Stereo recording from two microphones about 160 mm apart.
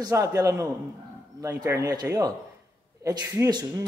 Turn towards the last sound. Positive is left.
turn(degrees=-25)  # may be behind; listen again after turning